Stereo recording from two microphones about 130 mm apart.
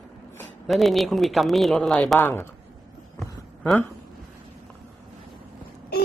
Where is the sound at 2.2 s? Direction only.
20° left (ahead or behind).